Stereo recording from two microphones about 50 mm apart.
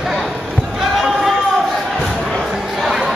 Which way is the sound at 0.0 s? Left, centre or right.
Centre.